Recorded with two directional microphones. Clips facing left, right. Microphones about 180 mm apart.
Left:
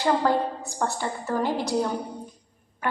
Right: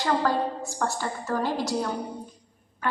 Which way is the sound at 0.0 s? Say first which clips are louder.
Left 2 dB; 15° left (ahead or behind).